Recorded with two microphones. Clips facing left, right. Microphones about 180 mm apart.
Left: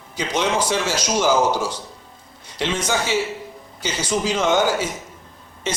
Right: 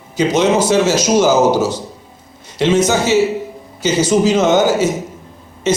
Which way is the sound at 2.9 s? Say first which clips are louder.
Right 9 dB; 45° right (ahead or behind).